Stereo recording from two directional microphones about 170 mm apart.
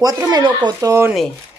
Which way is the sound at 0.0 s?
25° right (ahead or behind).